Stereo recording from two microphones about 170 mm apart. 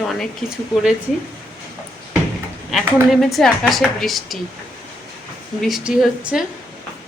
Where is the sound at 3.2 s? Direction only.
Centre (ahead or behind).